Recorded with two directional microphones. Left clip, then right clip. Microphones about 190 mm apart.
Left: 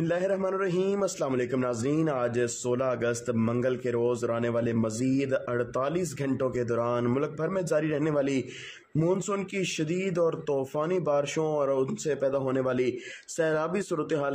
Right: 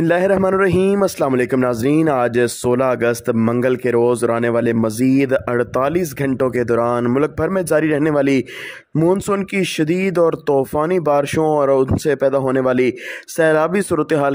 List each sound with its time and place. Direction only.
0.0 s a man's voice: 45° right (ahead or behind)